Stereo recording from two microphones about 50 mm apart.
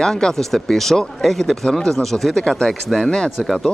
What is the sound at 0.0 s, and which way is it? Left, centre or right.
Speech, centre.